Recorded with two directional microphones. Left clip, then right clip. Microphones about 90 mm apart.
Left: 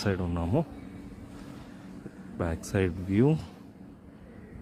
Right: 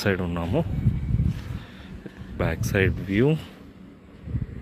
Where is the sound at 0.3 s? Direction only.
10° left (ahead or behind).